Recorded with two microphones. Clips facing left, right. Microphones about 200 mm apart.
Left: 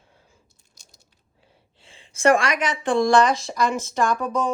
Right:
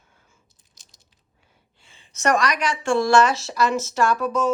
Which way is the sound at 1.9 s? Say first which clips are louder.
Left 4 dB; 30° left (ahead or behind).